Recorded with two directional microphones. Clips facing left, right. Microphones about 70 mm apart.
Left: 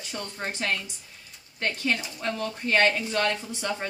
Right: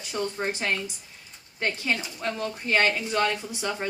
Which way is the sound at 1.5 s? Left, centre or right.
Centre.